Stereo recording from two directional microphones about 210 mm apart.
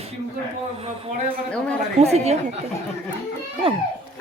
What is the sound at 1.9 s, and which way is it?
Speech, 30° right (ahead or behind).